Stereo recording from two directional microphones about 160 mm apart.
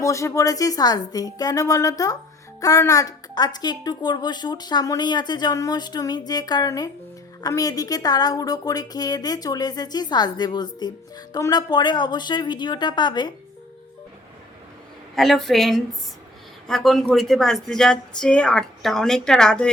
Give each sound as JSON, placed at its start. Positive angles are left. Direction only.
{"t": 0.0, "sound": "a woman's voice", "side_deg": 20}
{"t": 15.1, "sound": "speech", "side_deg": 0}